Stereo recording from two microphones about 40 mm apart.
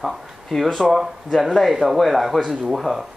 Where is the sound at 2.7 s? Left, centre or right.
Centre.